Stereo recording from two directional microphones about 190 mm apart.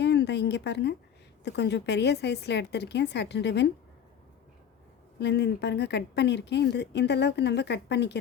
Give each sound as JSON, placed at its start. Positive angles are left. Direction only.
{"t": 0.0, "sound": "a woman's voice", "side_deg": 65}
{"t": 5.2, "sound": "speech", "side_deg": 65}